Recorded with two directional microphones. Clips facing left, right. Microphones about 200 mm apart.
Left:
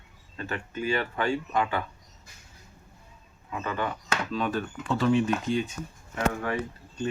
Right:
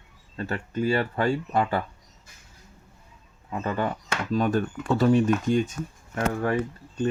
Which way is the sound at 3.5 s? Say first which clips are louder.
Right 4 dB; 40° right (ahead or behind).